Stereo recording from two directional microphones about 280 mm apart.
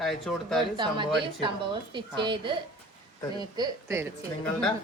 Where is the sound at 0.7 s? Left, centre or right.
Centre.